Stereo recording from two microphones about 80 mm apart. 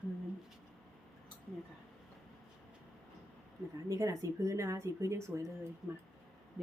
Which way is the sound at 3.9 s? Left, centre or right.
Right.